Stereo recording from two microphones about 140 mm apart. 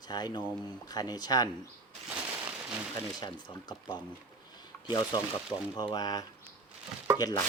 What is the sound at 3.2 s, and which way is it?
Speech, 30° left (ahead or behind).